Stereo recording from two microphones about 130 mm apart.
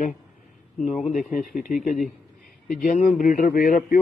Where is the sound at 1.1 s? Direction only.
90° left.